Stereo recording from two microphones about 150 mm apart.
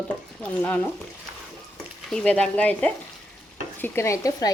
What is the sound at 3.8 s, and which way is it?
Speech, 15° left (ahead or behind).